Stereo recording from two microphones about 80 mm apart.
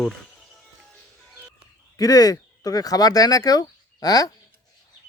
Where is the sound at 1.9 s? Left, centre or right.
Left.